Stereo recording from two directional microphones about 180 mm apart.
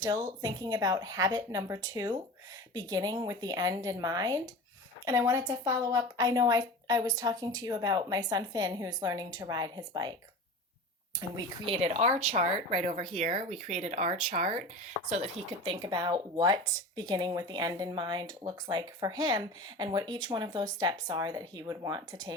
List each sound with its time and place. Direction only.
0.0 s speech: 20° right (ahead or behind)
11.2 s speech: 25° right (ahead or behind)
13.1 s speech: 45° right (ahead or behind); by 22.2 s 20° right (ahead or behind)